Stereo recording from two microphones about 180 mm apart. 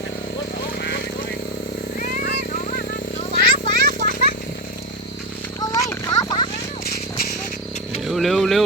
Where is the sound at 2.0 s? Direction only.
50° left (ahead or behind).